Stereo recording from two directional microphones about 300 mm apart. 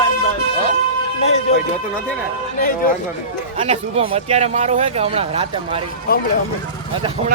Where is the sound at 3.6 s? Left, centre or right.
Right.